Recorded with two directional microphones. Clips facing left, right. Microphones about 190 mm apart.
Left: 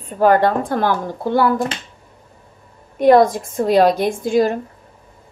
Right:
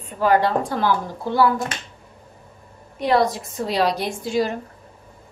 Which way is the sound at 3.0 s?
50° left (ahead or behind).